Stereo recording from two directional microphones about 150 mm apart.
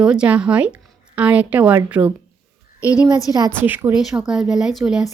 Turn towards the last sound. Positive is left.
turn(degrees=0)  # may be behind; listen again after turning